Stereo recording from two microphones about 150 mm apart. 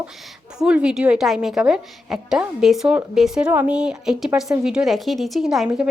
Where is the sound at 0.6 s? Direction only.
5° right (ahead or behind).